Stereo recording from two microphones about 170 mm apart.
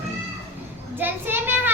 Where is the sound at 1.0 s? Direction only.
10° right (ahead or behind).